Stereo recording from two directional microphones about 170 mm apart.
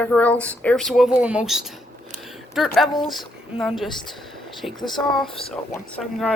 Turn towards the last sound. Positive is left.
turn(degrees=0)  # may be behind; listen again after turning